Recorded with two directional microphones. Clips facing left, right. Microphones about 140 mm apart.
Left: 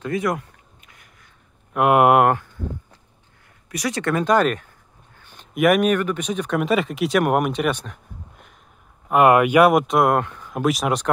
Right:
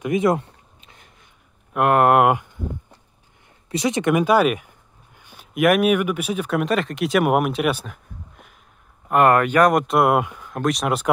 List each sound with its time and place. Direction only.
0.0 s a sound: 20° right (ahead or behind)
1.7 s speech: 5° left (ahead or behind)
2.2 s speech: 15° right (ahead or behind)
3.6 s speech: 25° right (ahead or behind); by 8.5 s centre (ahead or behind)
9.1 s speech: 10° left (ahead or behind); by 10.5 s 10° right (ahead or behind)
10.5 s speech: 5° left (ahead or behind)